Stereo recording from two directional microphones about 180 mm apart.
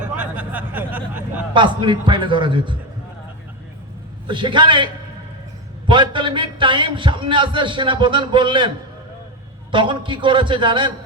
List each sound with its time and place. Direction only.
0.2 s a sound: 10° right (ahead or behind)
1.5 s a man's voice: 25° right (ahead or behind)
4.3 s a man's voice: 25° right (ahead or behind)
5.9 s a man's voice: 25° right (ahead or behind)
9.7 s a man's voice: 25° right (ahead or behind)